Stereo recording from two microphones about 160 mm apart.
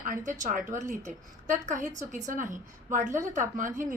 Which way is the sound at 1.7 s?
50° right (ahead or behind).